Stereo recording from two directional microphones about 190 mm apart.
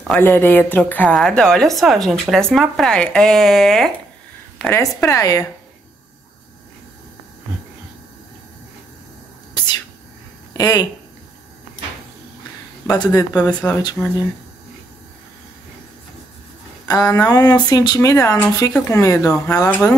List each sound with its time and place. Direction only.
0.1 s a woman's voice: 10° left (ahead or behind)
10.6 s speech: 20° left (ahead or behind)
12.8 s speech: 20° left (ahead or behind)
13.5 s a woman's voice: 5° left (ahead or behind)
16.8 s speech: 20° left (ahead or behind)